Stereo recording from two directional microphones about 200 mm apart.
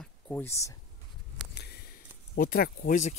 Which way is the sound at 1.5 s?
55° left (ahead or behind).